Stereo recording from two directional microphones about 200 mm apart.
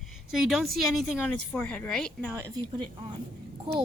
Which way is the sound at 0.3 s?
Centre (ahead or behind).